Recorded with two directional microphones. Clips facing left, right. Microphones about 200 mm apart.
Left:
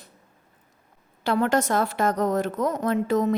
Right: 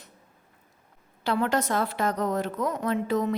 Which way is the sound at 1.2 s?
45° left (ahead or behind).